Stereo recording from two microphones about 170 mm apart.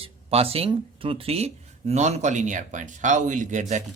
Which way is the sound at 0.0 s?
35° right (ahead or behind).